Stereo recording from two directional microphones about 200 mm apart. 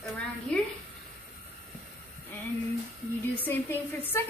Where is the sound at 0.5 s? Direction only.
5° left (ahead or behind).